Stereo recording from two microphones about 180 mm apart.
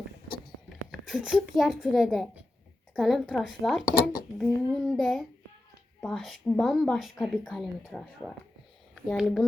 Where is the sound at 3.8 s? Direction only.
50° left (ahead or behind).